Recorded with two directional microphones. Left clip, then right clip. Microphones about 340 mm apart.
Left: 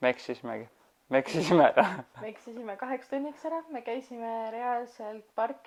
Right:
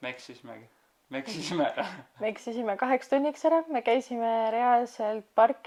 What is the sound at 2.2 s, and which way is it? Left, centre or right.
Speech, right.